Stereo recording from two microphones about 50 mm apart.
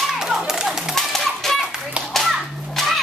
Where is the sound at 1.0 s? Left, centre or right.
Centre.